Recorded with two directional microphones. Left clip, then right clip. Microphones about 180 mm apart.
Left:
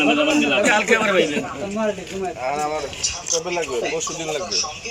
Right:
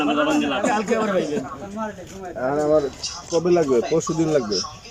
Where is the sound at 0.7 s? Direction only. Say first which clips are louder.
Left 4 dB; 30° right (ahead or behind).